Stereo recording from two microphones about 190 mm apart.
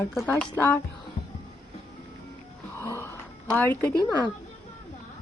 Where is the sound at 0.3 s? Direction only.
10° left (ahead or behind).